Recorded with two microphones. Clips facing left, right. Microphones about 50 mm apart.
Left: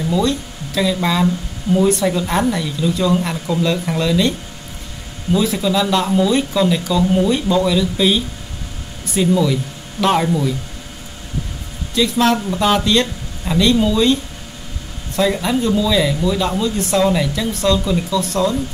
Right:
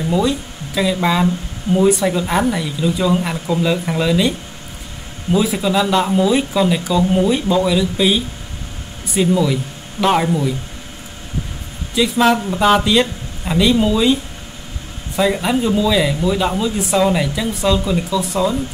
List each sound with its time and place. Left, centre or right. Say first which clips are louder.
0.2 s speech: even; centre
5.4 s speech: right 1 dB; centre
11.9 s speech: right 1 dB; centre
15.1 s speech: right 1 dB; centre